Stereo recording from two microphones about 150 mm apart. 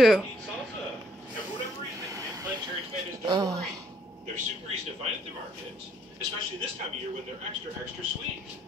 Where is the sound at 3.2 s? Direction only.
25° right (ahead or behind).